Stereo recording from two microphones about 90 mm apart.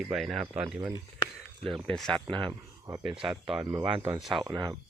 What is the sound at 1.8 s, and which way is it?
Speech, 5° left (ahead or behind).